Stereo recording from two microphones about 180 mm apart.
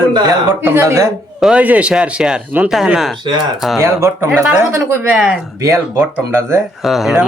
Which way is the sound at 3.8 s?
15° right (ahead or behind).